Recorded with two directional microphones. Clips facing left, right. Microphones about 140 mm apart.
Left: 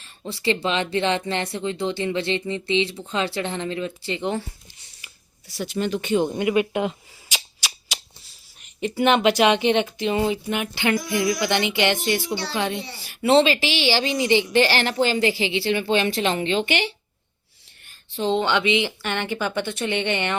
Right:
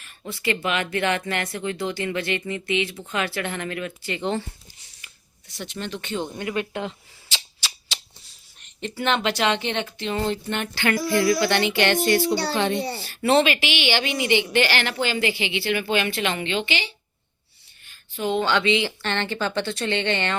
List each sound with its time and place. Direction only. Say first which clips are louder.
0.3 s speech: left 2 dB; 30° left (ahead or behind)
4.9 s a sound: left 1 dB; 5° left (ahead or behind)
8.5 s speech: left 6 dB; 10° left (ahead or behind)
10.8 s speech: right 2 dB; 20° left (ahead or behind)
13.4 s a woman's voice: left 2 dB; 30° left (ahead or behind)
16.6 s speech: left 5 dB; 60° left (ahead or behind)
18.2 s speech: left 1 dB; 25° left (ahead or behind)